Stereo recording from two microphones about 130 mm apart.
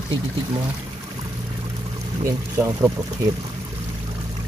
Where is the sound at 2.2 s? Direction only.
20° right (ahead or behind).